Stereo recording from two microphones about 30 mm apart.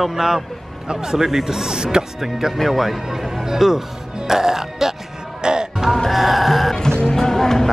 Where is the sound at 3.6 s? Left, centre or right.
Centre.